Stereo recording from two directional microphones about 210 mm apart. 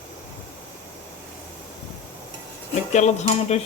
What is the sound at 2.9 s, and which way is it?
Speech, 30° left (ahead or behind).